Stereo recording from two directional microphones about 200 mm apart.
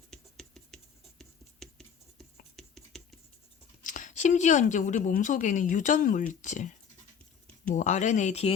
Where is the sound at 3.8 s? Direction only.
40° left (ahead or behind).